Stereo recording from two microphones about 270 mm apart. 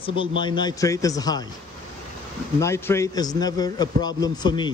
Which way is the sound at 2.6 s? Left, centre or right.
Centre.